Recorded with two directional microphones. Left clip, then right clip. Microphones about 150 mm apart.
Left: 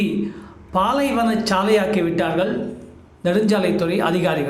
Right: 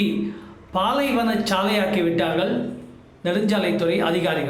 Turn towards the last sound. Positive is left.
turn(degrees=15)  # may be behind; listen again after turning